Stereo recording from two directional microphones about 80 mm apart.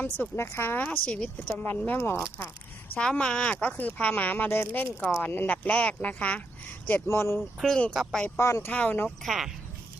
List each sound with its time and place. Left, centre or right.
0.3 s speech: left
0.9 s speech: centre
2.9 s speech: centre
7.1 s speech: left
7.6 s speech: centre
8.4 s speech: left
8.7 s speech: left
9.0 s speech: centre